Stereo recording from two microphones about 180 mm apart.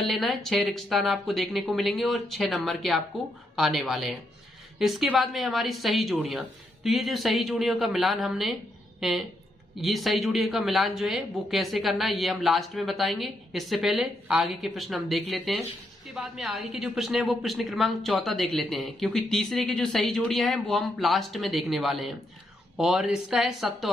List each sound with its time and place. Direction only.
0.0 s a woman's voice: centre (ahead or behind)